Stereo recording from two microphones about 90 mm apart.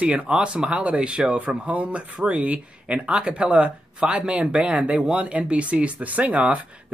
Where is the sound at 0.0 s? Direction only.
10° right (ahead or behind).